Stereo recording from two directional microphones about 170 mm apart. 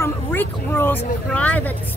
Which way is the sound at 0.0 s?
15° left (ahead or behind).